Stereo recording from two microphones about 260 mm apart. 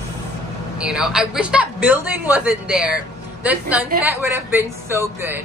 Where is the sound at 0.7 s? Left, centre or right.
Centre.